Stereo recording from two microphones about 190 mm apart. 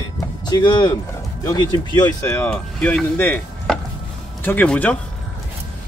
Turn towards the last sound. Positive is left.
turn(degrees=10)  # may be behind; listen again after turning